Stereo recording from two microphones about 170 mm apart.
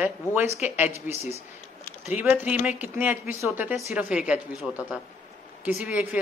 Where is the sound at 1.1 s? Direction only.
40° left (ahead or behind).